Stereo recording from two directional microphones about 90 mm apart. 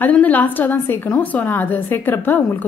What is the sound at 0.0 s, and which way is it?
A woman's voice, 20° left (ahead or behind).